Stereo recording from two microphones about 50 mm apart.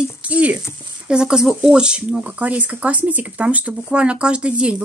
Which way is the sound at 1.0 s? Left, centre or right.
Centre.